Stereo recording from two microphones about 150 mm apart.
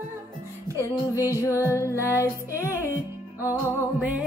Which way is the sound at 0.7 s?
20° left (ahead or behind).